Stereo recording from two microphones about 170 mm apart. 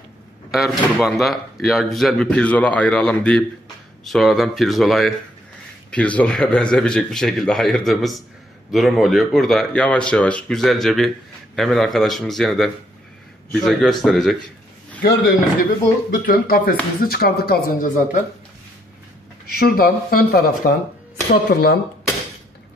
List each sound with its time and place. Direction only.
0.5 s speech: centre (ahead or behind)
15.0 s speech: 65° left (ahead or behind)
19.6 s speech: 60° left (ahead or behind)